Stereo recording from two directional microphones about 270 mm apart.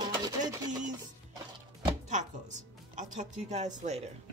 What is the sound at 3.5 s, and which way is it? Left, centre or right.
Speech, right.